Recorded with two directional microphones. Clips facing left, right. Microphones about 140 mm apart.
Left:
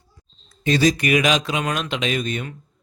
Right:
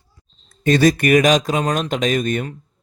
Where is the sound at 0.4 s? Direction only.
50° right (ahead or behind).